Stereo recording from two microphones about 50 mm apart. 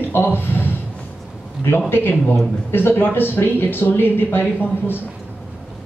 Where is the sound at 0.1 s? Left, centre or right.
Left.